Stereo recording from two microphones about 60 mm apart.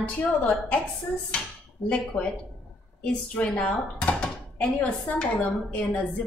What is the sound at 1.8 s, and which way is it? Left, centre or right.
A woman's voice, left.